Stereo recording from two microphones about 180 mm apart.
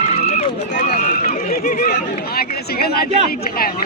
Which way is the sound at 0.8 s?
55° left (ahead or behind).